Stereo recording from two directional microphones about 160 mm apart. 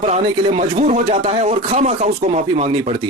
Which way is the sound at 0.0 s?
50° right (ahead or behind).